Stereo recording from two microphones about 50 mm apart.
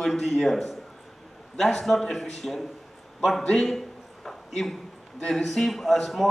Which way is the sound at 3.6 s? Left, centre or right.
Centre.